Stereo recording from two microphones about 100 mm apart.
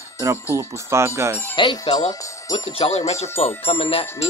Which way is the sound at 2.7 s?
85° left.